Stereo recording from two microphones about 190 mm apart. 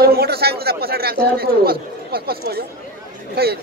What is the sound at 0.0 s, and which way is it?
Speech, 55° right (ahead or behind).